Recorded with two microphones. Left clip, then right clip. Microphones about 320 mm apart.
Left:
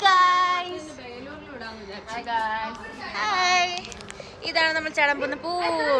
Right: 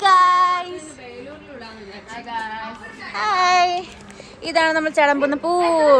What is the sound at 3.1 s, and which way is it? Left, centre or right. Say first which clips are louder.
A woman's voice: right 5 dB; centre.